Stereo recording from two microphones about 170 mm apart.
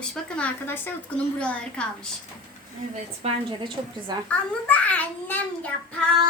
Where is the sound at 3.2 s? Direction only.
30° right (ahead or behind).